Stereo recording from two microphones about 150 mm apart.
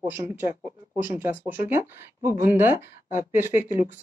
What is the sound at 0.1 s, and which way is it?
Speech, 15° right (ahead or behind).